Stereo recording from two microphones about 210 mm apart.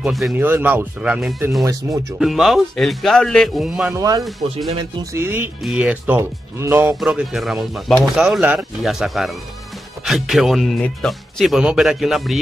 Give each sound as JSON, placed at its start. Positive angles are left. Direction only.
{"t": 0.0, "sound": "speech", "side_deg": -5}
{"t": 1.6, "sound": "speech", "side_deg": -15}
{"t": 2.1, "sound": "speech", "side_deg": 0}